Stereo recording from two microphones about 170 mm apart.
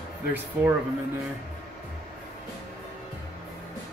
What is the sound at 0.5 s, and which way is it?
Speech, 10° right (ahead or behind).